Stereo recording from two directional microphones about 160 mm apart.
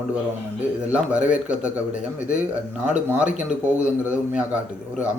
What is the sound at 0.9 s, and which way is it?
Speech, 10° right (ahead or behind).